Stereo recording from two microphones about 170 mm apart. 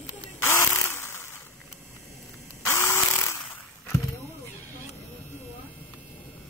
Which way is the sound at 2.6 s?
15° left (ahead or behind).